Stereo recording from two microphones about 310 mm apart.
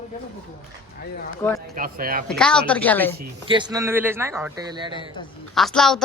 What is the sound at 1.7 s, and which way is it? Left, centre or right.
Speech, right.